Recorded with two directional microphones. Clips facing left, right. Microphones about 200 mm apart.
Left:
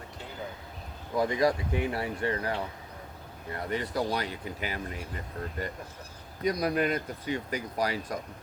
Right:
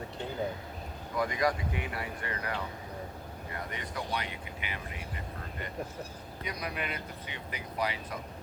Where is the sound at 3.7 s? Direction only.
35° left (ahead or behind).